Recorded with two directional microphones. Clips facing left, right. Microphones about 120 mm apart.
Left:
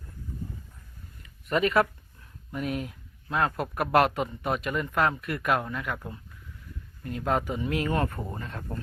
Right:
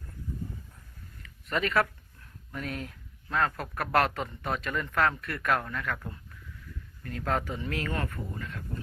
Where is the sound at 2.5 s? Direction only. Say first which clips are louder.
Left 5 dB; 10° left (ahead or behind); by 8.7 s 35° left (ahead or behind).